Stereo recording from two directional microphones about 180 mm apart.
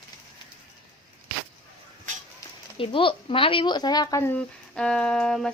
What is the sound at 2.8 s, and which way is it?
Speech, 30° left (ahead or behind).